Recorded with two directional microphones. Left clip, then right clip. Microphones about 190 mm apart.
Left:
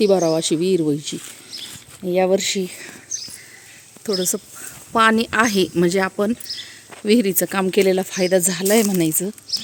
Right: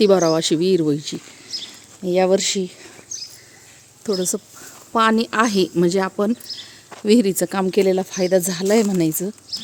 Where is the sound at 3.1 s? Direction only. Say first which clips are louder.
Left 2 dB; 50° right (ahead or behind).